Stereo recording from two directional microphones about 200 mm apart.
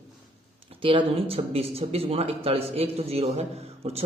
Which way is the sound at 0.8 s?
25° right (ahead or behind).